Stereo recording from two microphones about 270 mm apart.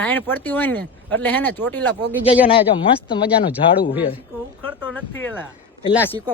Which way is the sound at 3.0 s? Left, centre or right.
Centre.